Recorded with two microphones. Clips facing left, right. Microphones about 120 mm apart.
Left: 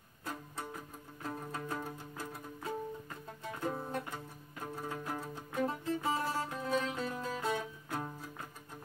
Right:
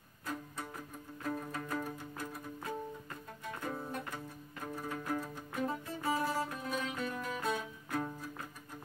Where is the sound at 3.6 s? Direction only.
25° left (ahead or behind).